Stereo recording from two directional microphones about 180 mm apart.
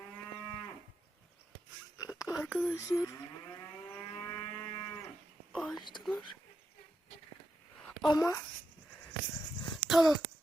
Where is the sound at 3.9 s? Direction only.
15° left (ahead or behind).